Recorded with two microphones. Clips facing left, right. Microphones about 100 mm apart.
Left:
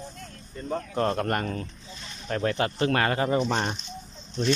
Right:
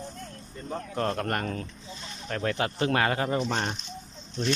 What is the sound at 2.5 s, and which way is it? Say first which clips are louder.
Speech: even; 10° right (ahead or behind).